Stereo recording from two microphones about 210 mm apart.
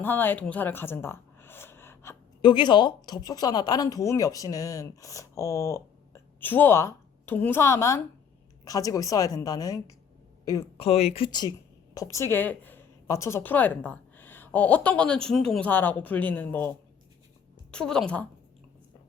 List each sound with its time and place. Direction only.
0.0 s a woman's voice: 10° left (ahead or behind)
10.8 s a woman's voice: 30° left (ahead or behind); by 18.0 s 5° left (ahead or behind)